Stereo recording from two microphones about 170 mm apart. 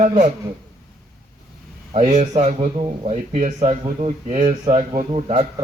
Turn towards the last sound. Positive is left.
turn(degrees=-35)  # may be behind; listen again after turning